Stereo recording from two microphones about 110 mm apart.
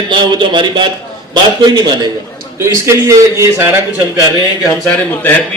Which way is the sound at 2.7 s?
25° right (ahead or behind).